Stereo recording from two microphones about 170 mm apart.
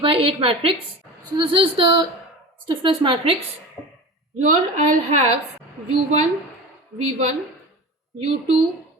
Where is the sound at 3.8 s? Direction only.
5° left (ahead or behind).